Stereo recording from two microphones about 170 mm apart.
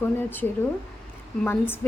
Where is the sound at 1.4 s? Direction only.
10° left (ahead or behind).